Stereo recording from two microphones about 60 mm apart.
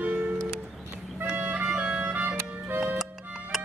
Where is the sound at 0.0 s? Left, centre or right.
Right.